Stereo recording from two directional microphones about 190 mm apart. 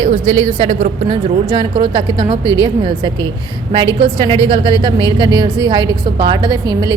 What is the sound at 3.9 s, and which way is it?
A woman's voice, 30° right (ahead or behind).